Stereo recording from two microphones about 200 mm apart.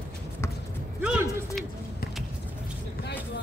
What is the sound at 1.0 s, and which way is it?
Speech, 5° right (ahead or behind).